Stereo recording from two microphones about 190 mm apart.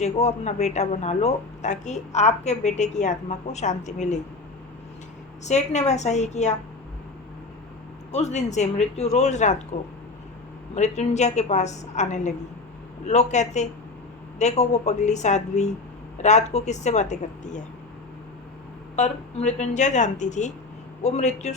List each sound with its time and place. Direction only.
0.0 s speech: 35° left (ahead or behind)
5.4 s speech: 35° left (ahead or behind)
8.1 s speech: 35° left (ahead or behind)
10.8 s speech: 35° left (ahead or behind)
18.9 s speech: 35° left (ahead or behind)